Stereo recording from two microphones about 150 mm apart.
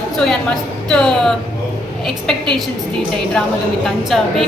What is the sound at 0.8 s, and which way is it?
A woman's voice, 5° left (ahead or behind).